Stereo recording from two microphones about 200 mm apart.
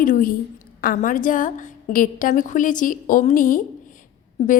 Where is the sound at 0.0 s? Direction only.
45° left (ahead or behind).